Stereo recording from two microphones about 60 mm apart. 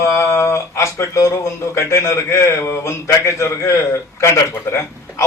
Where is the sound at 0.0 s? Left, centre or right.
Left.